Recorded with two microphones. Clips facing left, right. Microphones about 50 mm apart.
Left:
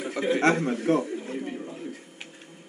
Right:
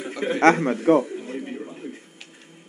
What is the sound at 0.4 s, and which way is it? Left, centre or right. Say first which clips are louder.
Speech: right 7 dB; right.